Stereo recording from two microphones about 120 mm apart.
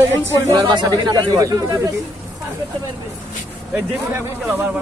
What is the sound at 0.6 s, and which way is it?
Speech, 35° right (ahead or behind).